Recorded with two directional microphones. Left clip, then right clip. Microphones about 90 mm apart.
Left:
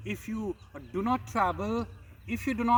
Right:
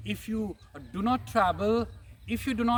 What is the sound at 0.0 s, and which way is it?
Speech, 35° right (ahead or behind).